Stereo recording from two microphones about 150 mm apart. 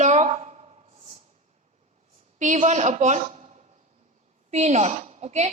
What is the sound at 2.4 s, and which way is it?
A woman's voice, 55° right (ahead or behind).